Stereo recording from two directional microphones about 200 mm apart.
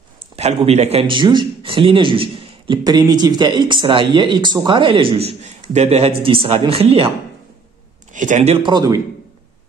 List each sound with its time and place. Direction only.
0.6 s a man's voice: 30° right (ahead or behind)
8.1 s speech: 40° right (ahead or behind)
8.6 s a man's voice: 20° right (ahead or behind)